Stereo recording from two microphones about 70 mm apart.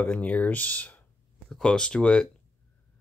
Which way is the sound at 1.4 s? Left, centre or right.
Centre.